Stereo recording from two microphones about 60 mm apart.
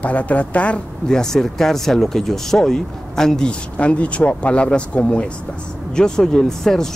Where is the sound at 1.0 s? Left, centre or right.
Centre.